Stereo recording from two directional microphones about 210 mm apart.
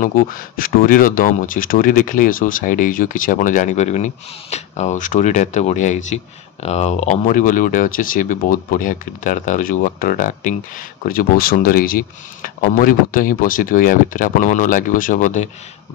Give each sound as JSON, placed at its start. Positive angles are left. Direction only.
{"t": 0.0, "sound": "speech", "side_deg": 40}